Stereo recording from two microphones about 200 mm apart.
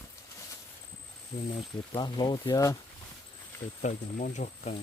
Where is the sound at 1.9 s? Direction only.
20° left (ahead or behind).